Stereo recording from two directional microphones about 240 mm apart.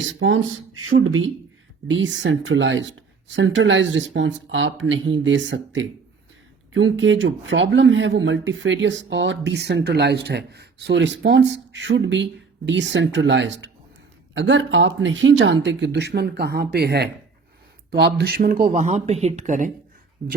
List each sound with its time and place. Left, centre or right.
0.0 s speech: right